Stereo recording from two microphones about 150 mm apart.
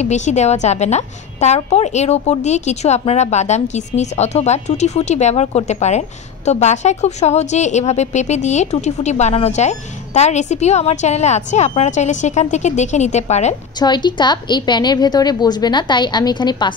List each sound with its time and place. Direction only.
0.0 s a woman's voice: 50° left (ahead or behind)
13.7 s a woman's voice: 30° left (ahead or behind)